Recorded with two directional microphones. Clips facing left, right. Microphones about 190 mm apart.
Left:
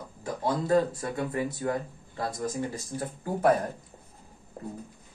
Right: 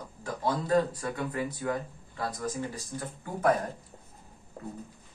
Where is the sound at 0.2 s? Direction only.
25° left (ahead or behind).